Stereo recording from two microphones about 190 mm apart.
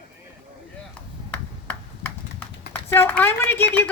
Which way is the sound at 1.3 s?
10° left (ahead or behind).